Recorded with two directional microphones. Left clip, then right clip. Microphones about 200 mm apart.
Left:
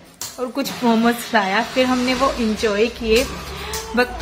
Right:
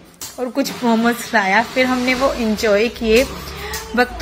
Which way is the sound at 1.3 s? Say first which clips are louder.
Right 4 dB; 15° right (ahead or behind).